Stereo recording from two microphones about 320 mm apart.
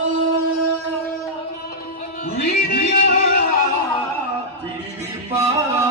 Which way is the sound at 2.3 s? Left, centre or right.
Left.